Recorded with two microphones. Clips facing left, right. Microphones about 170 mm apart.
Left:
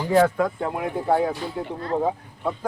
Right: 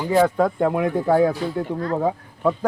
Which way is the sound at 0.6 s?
80° right.